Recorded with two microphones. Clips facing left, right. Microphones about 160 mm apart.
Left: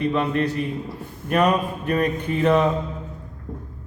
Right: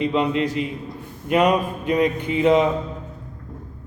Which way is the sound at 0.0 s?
15° right (ahead or behind).